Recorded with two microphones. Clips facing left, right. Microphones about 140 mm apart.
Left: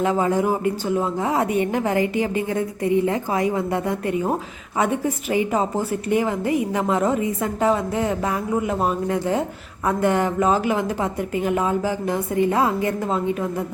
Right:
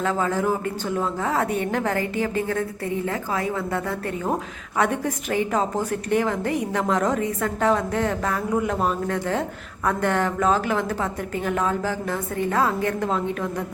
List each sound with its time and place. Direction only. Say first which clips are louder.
0.0 s a woman's voice: left 3 dB; 15° left (ahead or behind)
4.8 s a woman's voice: left 1 dB; 5° left (ahead or behind)